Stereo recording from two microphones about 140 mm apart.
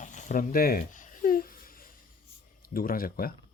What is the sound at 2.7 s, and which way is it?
Speech, 90° left.